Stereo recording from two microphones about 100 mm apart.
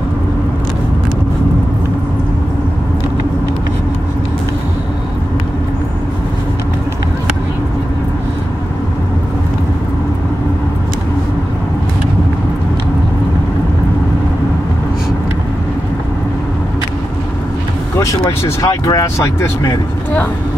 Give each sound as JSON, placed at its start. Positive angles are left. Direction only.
{"t": 18.6, "sound": "speech", "side_deg": 35}